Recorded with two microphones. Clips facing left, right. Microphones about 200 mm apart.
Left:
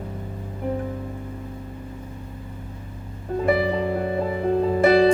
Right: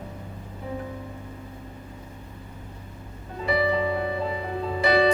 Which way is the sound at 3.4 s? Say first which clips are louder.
Left 2 dB; 50° left (ahead or behind).